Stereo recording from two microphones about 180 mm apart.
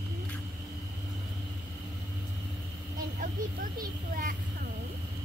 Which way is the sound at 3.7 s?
50° right (ahead or behind).